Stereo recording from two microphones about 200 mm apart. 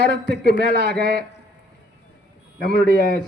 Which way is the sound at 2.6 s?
50° right (ahead or behind).